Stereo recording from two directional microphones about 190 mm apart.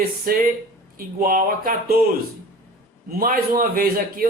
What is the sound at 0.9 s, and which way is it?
A man's voice, 50° right (ahead or behind).